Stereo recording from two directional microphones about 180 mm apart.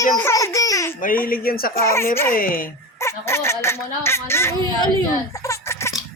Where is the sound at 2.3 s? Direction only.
50° left (ahead or behind).